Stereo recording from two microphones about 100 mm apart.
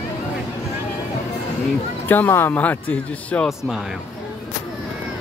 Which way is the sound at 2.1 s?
20° left (ahead or behind).